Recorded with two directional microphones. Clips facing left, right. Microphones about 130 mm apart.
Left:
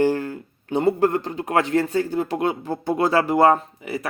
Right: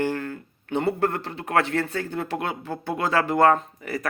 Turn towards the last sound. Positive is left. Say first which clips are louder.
# left 1 dB
turn(degrees=25)  # may be behind; listen again after turning